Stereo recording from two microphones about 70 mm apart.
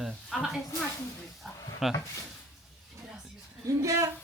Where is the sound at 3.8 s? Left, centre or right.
Right.